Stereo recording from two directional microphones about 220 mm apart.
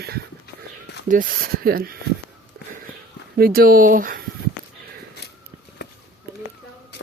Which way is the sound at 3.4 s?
40° right (ahead or behind).